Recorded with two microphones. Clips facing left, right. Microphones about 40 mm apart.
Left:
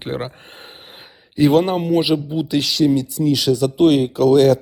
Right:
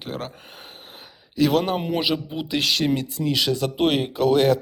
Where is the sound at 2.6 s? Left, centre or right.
Right.